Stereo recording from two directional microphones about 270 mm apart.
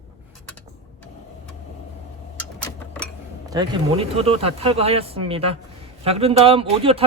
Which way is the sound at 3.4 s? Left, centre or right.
Centre.